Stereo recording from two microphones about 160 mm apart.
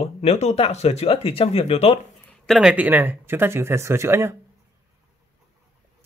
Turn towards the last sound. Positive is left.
turn(degrees=-15)  # may be behind; listen again after turning